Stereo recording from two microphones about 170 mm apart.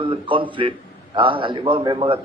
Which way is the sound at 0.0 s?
30° right (ahead or behind).